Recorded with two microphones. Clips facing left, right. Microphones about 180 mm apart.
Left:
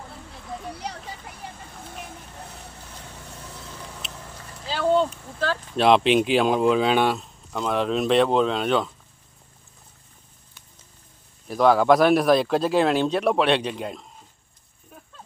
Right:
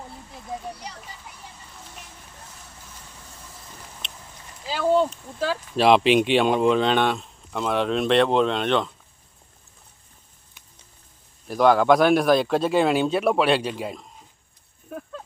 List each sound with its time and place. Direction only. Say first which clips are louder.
0.8 s vehicle: left 5 dB; 65° left (ahead or behind)
4.7 s speech: even; 10° right (ahead or behind)
11.4 s speech: even; centre (ahead or behind)
14.8 s a sound: right 13 dB; 65° right (ahead or behind)